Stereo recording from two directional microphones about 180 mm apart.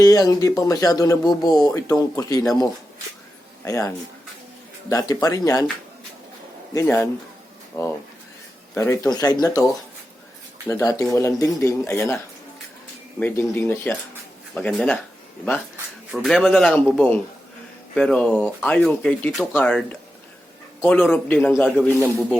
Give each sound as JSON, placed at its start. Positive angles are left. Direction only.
{"t": 0.0, "sound": "speech", "side_deg": 20}
{"t": 3.6, "sound": "speech", "side_deg": 15}
{"t": 6.7, "sound": "a man's voice", "side_deg": 15}
{"t": 10.7, "sound": "a man's voice", "side_deg": 20}
{"t": 16.1, "sound": "a man's voice", "side_deg": 0}